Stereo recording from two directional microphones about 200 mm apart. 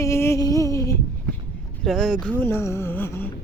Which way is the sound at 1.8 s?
Centre (ahead or behind).